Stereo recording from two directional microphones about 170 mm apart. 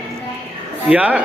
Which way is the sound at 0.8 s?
10° right (ahead or behind).